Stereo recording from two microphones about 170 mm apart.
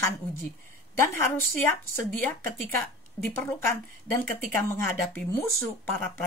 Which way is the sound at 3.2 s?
20° left (ahead or behind).